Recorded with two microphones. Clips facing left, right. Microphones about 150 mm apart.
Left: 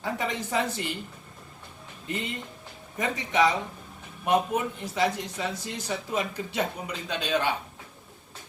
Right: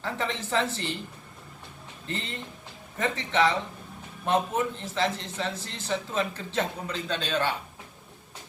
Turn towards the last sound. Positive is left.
turn(degrees=15)  # may be behind; listen again after turning